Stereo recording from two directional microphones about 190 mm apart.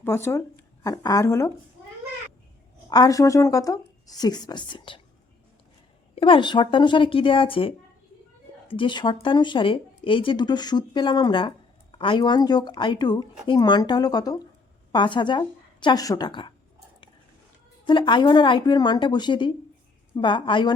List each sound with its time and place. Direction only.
0.0 s speech: 15° left (ahead or behind)
2.9 s speech: 20° left (ahead or behind)
6.1 s speech: 25° left (ahead or behind)
17.8 s speech: 25° left (ahead or behind)